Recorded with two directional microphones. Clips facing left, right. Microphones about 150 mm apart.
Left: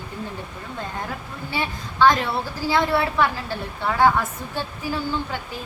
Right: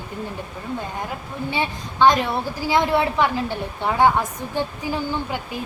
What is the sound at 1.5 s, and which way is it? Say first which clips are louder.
A woman's voice: right 1 dB; 20° right (ahead or behind).